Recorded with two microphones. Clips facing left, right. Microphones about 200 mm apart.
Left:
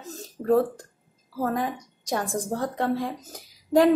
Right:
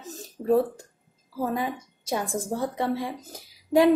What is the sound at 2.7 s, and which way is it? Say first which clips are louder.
Speech: left 1 dB; 20° right (ahead or behind).